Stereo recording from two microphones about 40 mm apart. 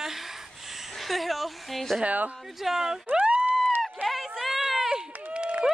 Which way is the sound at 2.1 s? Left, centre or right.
Right.